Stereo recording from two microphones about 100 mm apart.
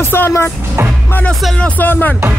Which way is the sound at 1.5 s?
15° left (ahead or behind).